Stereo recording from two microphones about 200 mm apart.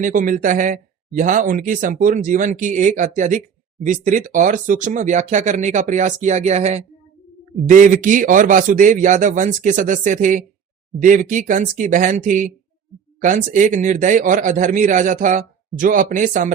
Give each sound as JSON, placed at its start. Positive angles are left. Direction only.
{"t": 0.0, "sound": "speech", "side_deg": -40}